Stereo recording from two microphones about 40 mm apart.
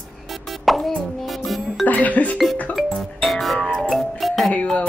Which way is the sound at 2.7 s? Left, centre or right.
Centre.